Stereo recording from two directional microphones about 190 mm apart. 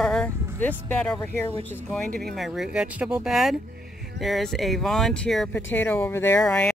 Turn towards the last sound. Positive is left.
turn(degrees=5)  # may be behind; listen again after turning